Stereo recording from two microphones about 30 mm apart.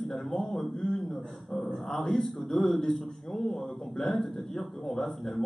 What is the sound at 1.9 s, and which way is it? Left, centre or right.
Speech, centre.